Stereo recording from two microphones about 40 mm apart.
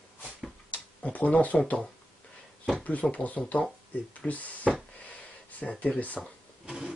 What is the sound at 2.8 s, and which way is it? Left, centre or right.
Speech, left.